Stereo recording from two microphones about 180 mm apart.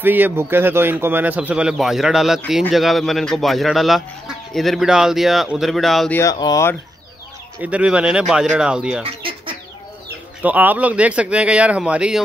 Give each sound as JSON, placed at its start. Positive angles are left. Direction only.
{"t": 0.0, "sound": "a man's voice", "side_deg": -10}
{"t": 6.1, "sound": "speech", "side_deg": 20}
{"t": 7.6, "sound": "speech", "side_deg": -5}
{"t": 9.0, "sound": "chicken", "side_deg": -30}
{"t": 10.4, "sound": "a man's voice", "side_deg": -10}